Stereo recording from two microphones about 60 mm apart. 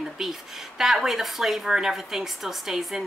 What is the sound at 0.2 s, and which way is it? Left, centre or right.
Speech, centre.